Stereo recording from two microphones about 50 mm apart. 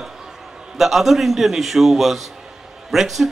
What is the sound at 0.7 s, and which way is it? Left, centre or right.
A man's voice, centre.